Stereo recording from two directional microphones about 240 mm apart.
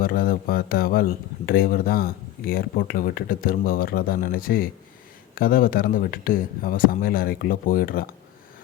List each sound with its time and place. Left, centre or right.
0.0 s speech: left